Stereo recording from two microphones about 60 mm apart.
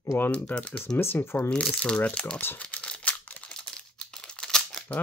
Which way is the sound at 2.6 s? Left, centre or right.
Left.